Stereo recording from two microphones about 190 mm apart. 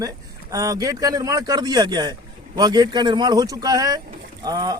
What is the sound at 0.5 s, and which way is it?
A man's voice, 20° right (ahead or behind).